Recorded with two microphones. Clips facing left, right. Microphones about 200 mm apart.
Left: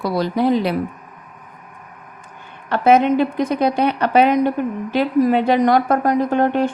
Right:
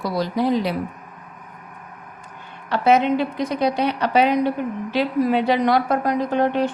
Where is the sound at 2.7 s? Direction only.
50° left (ahead or behind).